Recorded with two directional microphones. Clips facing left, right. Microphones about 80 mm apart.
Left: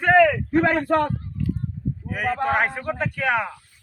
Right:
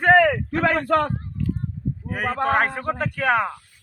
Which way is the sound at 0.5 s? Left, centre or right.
Right.